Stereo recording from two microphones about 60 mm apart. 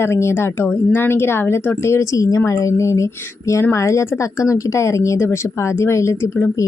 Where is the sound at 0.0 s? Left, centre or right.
Left.